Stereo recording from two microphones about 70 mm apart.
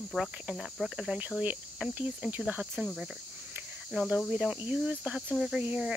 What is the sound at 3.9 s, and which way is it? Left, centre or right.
Cricket, centre.